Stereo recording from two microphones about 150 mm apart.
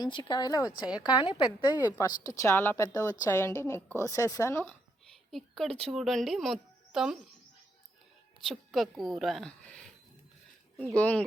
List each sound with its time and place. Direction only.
0.0 s a woman's voice: 30° left (ahead or behind)
5.3 s speech: centre (ahead or behind)
8.4 s a woman's voice: centre (ahead or behind)
10.9 s a woman's voice: 10° left (ahead or behind)